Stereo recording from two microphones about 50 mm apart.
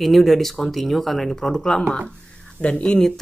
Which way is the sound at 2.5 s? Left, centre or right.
Left.